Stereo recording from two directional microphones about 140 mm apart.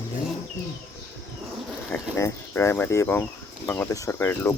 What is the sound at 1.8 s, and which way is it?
Speech, 15° left (ahead or behind).